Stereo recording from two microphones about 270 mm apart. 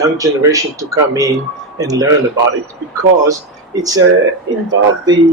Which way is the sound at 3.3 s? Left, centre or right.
Centre.